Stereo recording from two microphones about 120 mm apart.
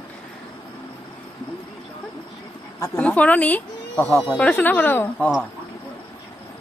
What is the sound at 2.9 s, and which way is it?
Speech, 10° left (ahead or behind).